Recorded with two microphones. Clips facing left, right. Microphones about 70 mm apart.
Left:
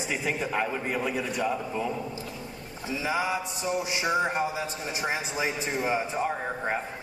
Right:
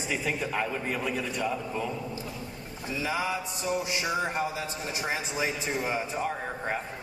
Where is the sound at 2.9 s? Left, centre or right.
Centre.